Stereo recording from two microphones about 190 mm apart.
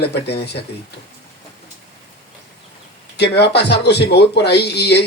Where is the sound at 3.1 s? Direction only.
60° left (ahead or behind).